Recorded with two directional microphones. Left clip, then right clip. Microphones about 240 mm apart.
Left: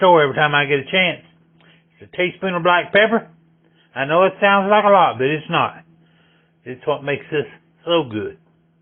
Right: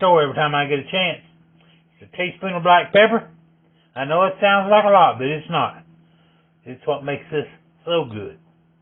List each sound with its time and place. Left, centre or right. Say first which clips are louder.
0.0 s a man's voice: left 3 dB; left
2.1 s a man's voice: left 4 dB; left